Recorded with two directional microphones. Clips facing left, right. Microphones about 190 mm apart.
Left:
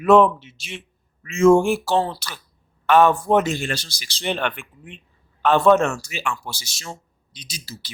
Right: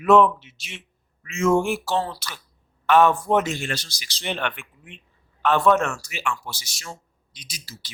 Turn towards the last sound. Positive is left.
turn(degrees=30)  # may be behind; listen again after turning